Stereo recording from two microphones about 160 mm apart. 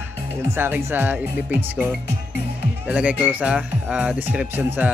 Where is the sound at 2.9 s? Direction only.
10° right (ahead or behind).